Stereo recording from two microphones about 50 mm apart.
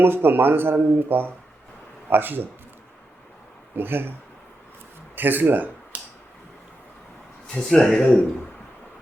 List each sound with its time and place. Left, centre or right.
0.0 s speech: right
3.8 s speech: right
5.1 s speech: right
7.7 s speech: centre